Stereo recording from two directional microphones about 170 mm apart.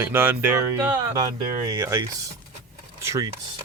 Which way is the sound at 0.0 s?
10° right (ahead or behind).